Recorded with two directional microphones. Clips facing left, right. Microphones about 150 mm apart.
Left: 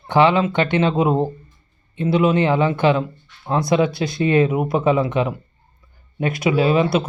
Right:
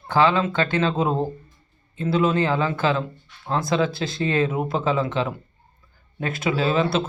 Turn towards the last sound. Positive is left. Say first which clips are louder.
# left 4 dB
turn(degrees=15)  # may be behind; listen again after turning